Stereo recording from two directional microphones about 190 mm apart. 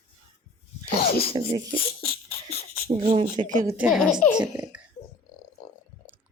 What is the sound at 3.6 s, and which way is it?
Speech, 15° right (ahead or behind).